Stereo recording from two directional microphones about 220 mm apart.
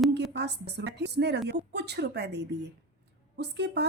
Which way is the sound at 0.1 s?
50° right (ahead or behind).